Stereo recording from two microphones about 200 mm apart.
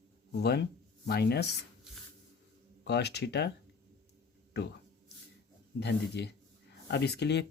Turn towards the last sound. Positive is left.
turn(degrees=60)  # may be behind; listen again after turning